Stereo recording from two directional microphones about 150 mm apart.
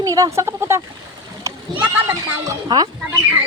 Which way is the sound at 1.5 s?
20° right (ahead or behind).